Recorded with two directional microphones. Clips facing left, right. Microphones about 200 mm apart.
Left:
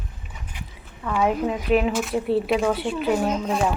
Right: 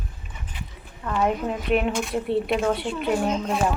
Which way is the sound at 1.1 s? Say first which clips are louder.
Left 2 dB; 10° left (ahead or behind).